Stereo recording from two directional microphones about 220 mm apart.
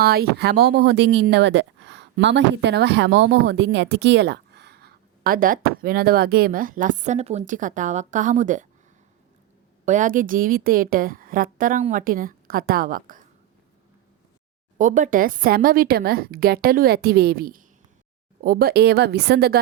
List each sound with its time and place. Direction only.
0.0 s speech: 45° right (ahead or behind)
9.8 s a woman's voice: 35° right (ahead or behind)
14.8 s speech: 35° right (ahead or behind)